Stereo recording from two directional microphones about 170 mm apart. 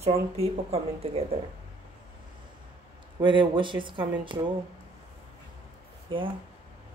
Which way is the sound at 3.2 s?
30° right (ahead or behind).